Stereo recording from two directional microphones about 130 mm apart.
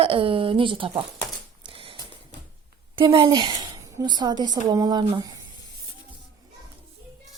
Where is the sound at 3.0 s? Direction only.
40° right (ahead or behind).